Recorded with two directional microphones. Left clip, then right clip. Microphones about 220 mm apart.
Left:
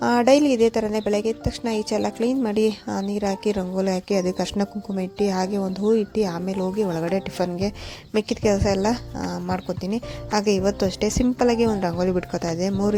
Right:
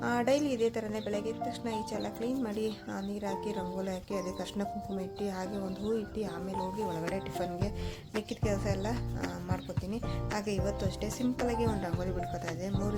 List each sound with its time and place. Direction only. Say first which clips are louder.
0.0 s a woman's voice: left 12 dB; 30° left (ahead or behind)